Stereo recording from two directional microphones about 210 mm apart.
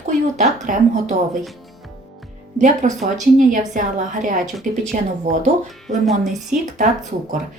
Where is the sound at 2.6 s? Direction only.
35° right (ahead or behind).